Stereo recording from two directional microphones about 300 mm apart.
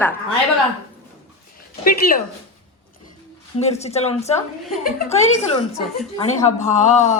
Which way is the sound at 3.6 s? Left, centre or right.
Left.